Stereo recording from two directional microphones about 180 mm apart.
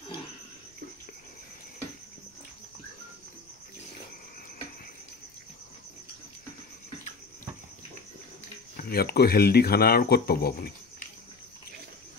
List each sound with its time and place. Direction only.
8.7 s speech: 60° left (ahead or behind)